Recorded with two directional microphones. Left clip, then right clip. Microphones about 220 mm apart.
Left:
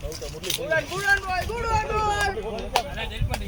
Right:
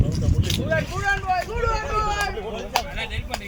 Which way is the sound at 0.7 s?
50° left (ahead or behind).